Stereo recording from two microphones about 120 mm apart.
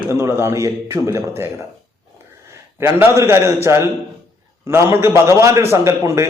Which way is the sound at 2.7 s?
20° right (ahead or behind).